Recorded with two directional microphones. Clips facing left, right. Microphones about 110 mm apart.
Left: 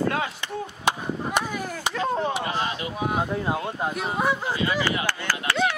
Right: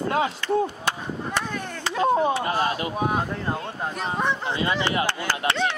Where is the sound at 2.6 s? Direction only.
45° right (ahead or behind).